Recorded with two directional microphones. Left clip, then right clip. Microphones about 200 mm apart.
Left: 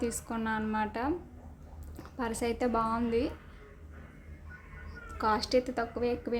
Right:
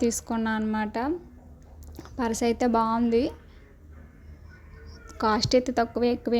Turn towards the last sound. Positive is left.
turn(degrees=-35)  # may be behind; listen again after turning